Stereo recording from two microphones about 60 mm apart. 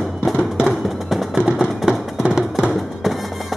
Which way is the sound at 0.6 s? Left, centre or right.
Centre.